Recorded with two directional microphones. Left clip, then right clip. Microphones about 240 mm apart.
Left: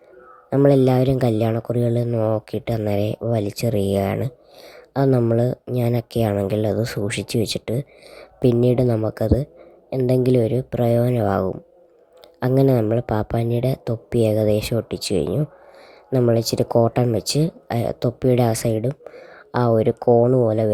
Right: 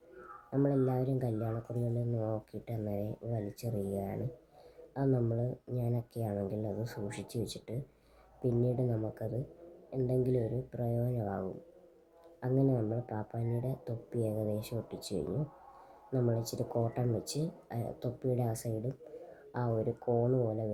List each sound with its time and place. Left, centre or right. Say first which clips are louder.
0.5 s speech: left 16 dB; left